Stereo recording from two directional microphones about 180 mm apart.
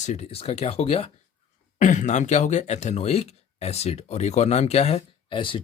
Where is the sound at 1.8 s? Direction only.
45° left (ahead or behind).